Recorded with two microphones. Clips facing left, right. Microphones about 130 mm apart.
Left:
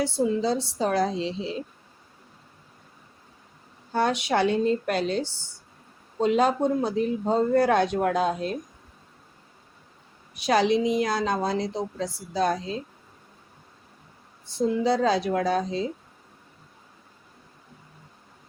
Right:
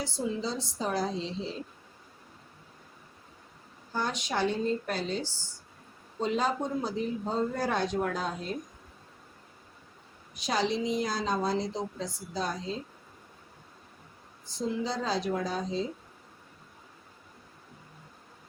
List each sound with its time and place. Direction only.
0.0 s a woman's voice: 60° left (ahead or behind)
3.9 s a woman's voice: 65° left (ahead or behind)
10.3 s a woman's voice: 65° left (ahead or behind)
14.5 s a woman's voice: 65° left (ahead or behind)